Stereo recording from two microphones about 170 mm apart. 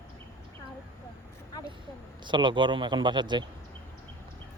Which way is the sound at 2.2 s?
25° right (ahead or behind).